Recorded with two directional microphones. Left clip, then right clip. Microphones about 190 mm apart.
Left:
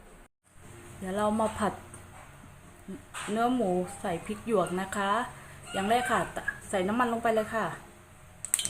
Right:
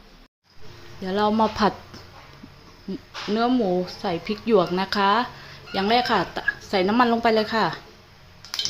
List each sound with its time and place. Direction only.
1.0 s speech: 25° right (ahead or behind)
3.3 s a woman's voice: 20° right (ahead or behind)